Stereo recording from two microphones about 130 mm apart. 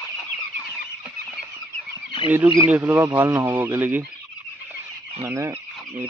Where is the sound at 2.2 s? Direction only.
15° right (ahead or behind).